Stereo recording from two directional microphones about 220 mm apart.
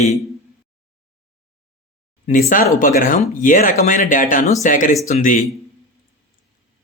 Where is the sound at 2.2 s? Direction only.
35° left (ahead or behind).